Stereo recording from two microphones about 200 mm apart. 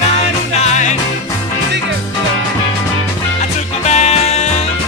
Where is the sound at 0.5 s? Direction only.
35° left (ahead or behind).